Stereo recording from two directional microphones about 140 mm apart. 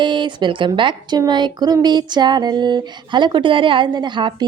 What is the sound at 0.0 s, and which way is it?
A woman's voice, 35° right (ahead or behind).